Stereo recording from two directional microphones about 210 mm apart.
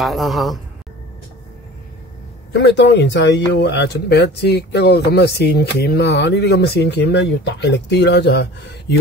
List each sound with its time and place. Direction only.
0.0 s speech: centre (ahead or behind)
2.5 s speech: 55° left (ahead or behind)